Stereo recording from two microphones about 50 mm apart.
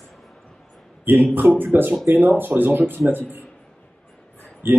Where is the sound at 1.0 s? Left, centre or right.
Right.